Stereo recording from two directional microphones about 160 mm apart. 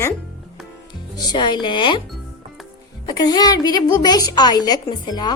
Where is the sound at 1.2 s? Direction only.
25° left (ahead or behind).